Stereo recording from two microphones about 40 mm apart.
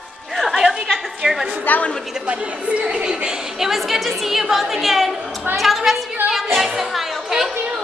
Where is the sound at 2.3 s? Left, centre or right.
Right.